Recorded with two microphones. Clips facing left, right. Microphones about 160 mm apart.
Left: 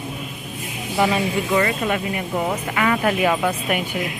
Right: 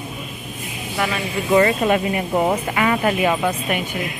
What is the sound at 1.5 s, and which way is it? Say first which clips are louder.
Speech: right 8 dB; 25° right (ahead or behind).